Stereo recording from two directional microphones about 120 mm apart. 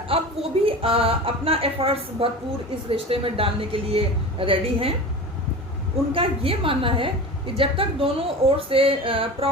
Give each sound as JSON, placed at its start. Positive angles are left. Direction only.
{"t": 0.1, "sound": "a sound", "side_deg": -50}
{"t": 0.6, "sound": "a woman's voice", "side_deg": -50}
{"t": 6.1, "sound": "a woman's voice", "side_deg": -50}